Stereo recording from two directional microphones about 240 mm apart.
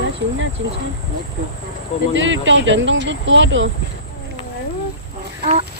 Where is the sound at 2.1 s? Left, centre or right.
Right.